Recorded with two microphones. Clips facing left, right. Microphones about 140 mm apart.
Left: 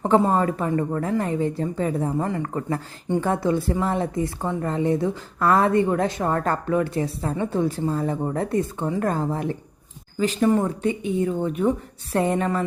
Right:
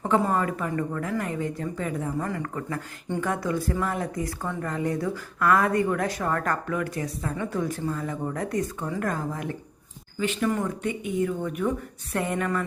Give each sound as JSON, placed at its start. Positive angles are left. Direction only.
{"t": 0.0, "sound": "a woman's voice", "side_deg": 30}